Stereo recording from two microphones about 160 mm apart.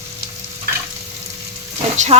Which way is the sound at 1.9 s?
45° right (ahead or behind).